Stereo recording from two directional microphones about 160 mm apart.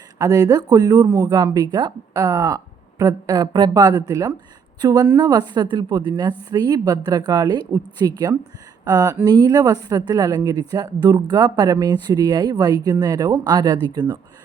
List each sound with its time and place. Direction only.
0.2 s a woman's voice: 20° right (ahead or behind)